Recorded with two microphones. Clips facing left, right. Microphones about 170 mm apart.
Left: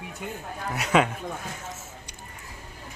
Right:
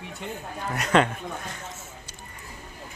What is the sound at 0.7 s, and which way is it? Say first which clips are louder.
Speech: right 1 dB; 5° left (ahead or behind).